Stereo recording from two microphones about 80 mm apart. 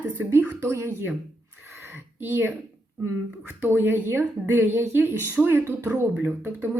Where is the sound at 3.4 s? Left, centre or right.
Right.